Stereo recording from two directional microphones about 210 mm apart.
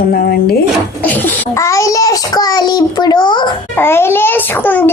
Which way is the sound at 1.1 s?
10° left (ahead or behind).